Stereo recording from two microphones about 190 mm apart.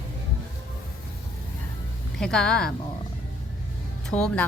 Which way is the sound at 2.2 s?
5° left (ahead or behind).